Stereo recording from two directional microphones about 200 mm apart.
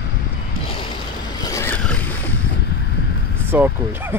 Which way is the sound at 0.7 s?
25° left (ahead or behind).